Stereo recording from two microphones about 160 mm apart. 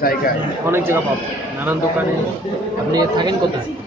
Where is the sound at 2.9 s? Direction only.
25° right (ahead or behind).